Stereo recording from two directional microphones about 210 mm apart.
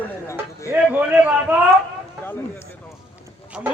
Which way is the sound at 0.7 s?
5° right (ahead or behind).